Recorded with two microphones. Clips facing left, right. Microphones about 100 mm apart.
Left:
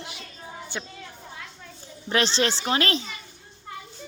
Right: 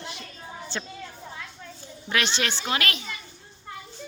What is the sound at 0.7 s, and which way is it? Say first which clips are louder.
Speech: right 1 dB; 15° left (ahead or behind).